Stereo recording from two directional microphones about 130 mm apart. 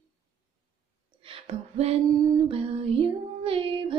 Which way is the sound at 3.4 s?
45° right (ahead or behind).